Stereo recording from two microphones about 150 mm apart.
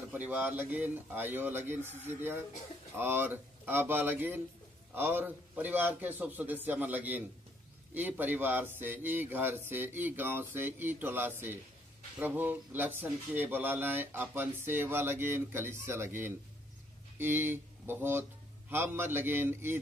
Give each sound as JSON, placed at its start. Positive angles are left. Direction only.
{"t": 0.1, "sound": "speech", "side_deg": -10}